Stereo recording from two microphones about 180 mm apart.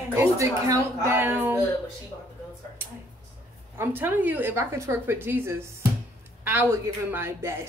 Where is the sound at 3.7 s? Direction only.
10° right (ahead or behind).